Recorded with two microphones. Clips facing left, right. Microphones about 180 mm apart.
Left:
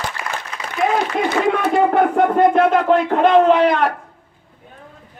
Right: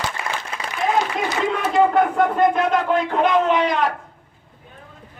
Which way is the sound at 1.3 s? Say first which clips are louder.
Left 5 dB; 60° left (ahead or behind).